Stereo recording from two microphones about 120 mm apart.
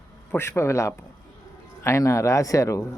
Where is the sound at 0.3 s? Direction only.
20° left (ahead or behind).